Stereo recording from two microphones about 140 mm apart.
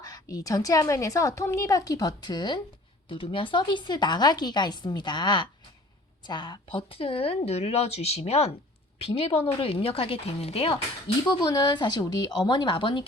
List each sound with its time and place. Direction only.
0.0 s a woman's voice: 25° left (ahead or behind); by 10.8 s 45° left (ahead or behind)
11.3 s a woman's voice: 30° left (ahead or behind)